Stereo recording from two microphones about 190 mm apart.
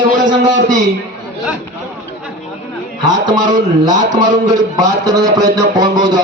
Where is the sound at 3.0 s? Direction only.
20° right (ahead or behind).